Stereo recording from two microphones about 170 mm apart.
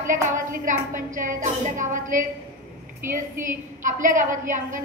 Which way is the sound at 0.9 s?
50° right (ahead or behind).